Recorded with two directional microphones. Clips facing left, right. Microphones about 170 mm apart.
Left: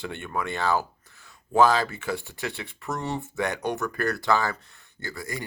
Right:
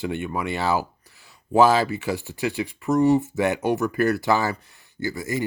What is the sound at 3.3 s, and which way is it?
Speech, 20° right (ahead or behind).